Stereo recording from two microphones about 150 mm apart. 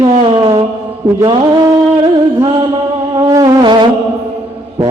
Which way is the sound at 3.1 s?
25° right (ahead or behind).